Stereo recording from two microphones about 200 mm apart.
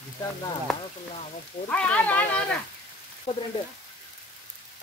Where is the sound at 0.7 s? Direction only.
Centre (ahead or behind).